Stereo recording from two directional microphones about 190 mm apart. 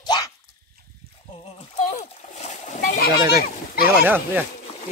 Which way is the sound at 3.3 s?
50° left (ahead or behind).